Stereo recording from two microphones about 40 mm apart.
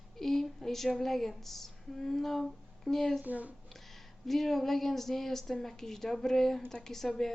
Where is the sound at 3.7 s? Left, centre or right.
Centre.